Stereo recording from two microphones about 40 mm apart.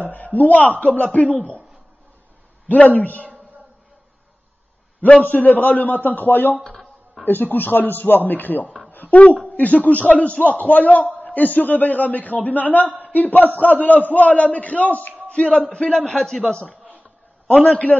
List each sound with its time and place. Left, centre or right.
0.1 s a man's voice: left
2.7 s a man's voice: left
5.0 s a man's voice: left
6.7 s a sound: centre
7.2 s a man's voice: left
8.9 s a sound: left
9.6 s a man's voice: left
15.2 s a sound: left
15.7 s a man's voice: left